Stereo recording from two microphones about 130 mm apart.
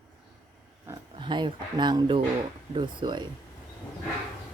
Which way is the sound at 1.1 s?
40° right (ahead or behind).